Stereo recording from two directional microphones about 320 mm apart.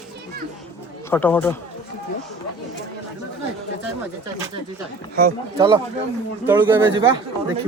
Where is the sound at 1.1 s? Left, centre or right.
Centre.